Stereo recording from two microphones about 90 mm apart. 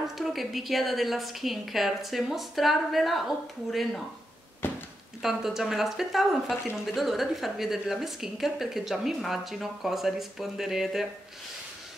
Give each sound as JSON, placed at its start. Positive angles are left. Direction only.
{"t": 0.2, "sound": "a woman's voice", "side_deg": 0}
{"t": 4.6, "sound": "a sound", "side_deg": 25}
{"t": 5.2, "sound": "a woman's voice", "side_deg": -5}